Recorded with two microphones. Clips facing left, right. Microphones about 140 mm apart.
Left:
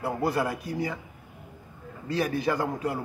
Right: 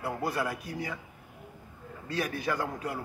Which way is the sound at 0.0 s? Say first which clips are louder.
Left 5 dB; 30° left (ahead or behind).